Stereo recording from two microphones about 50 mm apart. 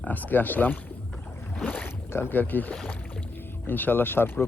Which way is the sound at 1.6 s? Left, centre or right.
Left.